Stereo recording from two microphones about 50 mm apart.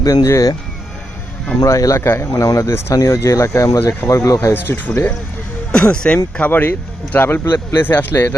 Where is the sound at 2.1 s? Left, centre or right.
Left.